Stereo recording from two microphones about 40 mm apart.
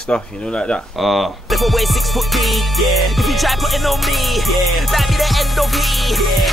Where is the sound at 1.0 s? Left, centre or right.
Centre.